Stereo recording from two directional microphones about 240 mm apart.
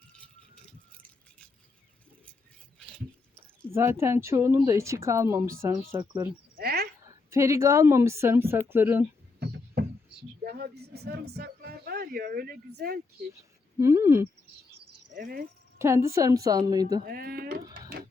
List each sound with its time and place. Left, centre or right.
3.7 s speech: centre
6.6 s a sound: right
7.1 s speech: centre
9.4 s a sound: right
13.7 s speech: centre
15.1 s speech: right
15.8 s speech: centre
17.1 s speech: right